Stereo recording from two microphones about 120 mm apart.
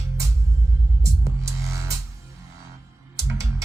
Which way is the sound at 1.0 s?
25° right (ahead or behind).